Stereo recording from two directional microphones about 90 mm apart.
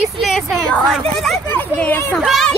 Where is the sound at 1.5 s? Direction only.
20° left (ahead or behind).